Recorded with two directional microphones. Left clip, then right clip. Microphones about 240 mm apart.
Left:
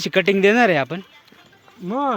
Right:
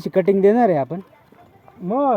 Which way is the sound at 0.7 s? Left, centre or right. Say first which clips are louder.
Even; left.